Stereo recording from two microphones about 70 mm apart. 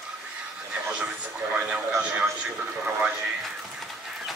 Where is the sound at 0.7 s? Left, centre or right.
Centre.